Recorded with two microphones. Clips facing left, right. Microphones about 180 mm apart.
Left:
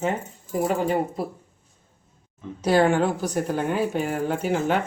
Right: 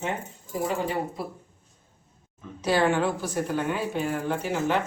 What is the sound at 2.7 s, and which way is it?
A woman's voice, 45° left (ahead or behind).